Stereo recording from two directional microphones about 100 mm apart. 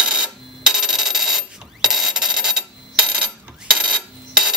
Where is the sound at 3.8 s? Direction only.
5° right (ahead or behind).